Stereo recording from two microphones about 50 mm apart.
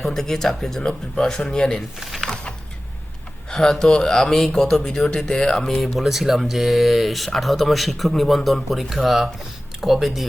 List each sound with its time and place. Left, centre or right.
0.0 s speech: centre
2.0 s speech: centre
2.3 s a sound: centre
3.5 s speech: centre